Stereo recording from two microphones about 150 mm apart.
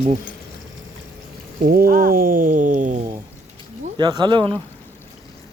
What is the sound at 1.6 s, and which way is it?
Speech, 75° right (ahead or behind).